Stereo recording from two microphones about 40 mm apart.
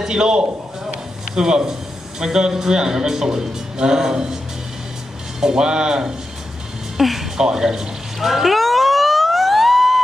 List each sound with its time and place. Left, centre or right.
0.0 s a man's voice: centre
5.4 s a man's voice: centre
7.0 s music: centre
7.3 s speech: centre
8.3 s emergency vehicle: centre